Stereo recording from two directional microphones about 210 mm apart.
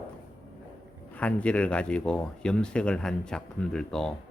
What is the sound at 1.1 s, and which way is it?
Speech, 5° left (ahead or behind).